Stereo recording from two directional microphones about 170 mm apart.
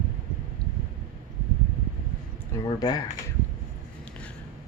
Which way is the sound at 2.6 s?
25° left (ahead or behind).